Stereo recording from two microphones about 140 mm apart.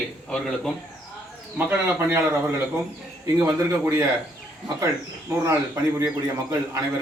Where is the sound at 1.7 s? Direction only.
15° right (ahead or behind).